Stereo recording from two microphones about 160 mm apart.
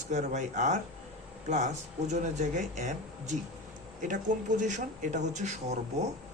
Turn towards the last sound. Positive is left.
turn(degrees=-45)  # may be behind; listen again after turning